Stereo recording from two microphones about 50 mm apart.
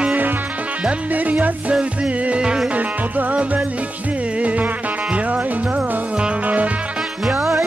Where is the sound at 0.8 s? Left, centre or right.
Right.